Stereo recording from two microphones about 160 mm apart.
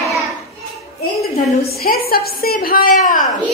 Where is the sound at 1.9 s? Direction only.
70° left (ahead or behind).